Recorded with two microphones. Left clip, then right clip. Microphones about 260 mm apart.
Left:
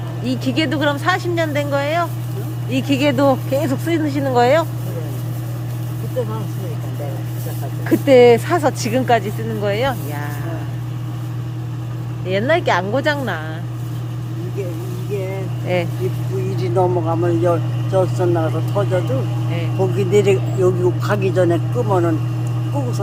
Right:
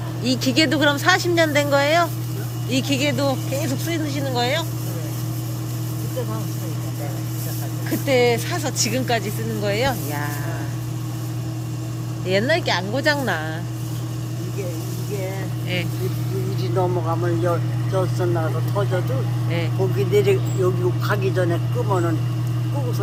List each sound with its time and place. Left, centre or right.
0.3 s speech: centre
7.9 s speech: left; by 10.2 s centre
12.3 s speech: centre
15.6 s speech: centre
16.6 s speech: left
20.0 s speech: left